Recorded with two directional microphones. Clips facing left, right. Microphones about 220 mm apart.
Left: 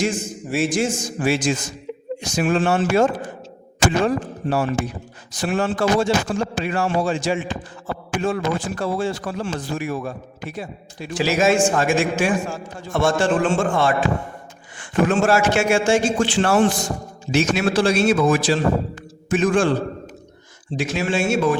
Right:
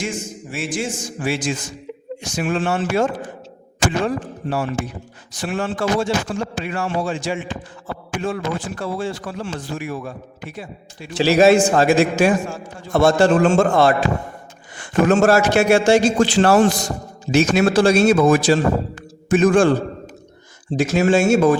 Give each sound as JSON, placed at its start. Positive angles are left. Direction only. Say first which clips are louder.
{"t": 0.5, "sound": "a man's voice", "louder": "left 5 dB", "side_deg": 40}
{"t": 11.2, "sound": "a man's voice", "louder": "right 5 dB", "side_deg": -35}
{"t": 20.7, "sound": "a man's voice", "louder": "right 6 dB", "side_deg": -45}